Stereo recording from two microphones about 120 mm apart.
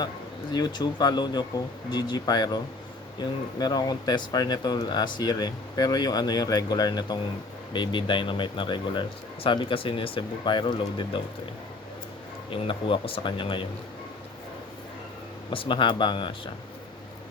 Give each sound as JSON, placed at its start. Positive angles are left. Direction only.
{"t": 0.5, "sound": "speech", "side_deg": 35}
{"t": 12.5, "sound": "speech", "side_deg": 45}
{"t": 15.4, "sound": "speech", "side_deg": 45}